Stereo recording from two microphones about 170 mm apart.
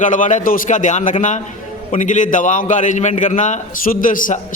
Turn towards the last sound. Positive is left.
turn(degrees=50)  # may be behind; listen again after turning